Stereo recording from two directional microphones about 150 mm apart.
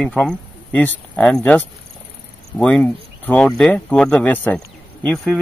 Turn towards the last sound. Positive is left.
turn(degrees=0)  # may be behind; listen again after turning